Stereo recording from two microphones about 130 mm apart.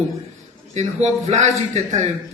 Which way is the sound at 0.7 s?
60° right (ahead or behind).